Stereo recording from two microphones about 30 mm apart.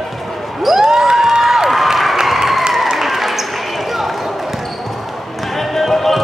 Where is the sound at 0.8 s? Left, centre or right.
Right.